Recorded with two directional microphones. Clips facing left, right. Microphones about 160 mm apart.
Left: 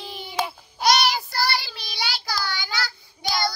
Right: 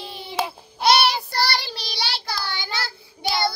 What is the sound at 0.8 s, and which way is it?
Child singing, 30° right (ahead or behind).